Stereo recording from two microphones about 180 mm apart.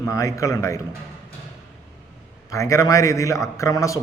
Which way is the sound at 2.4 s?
15° left (ahead or behind).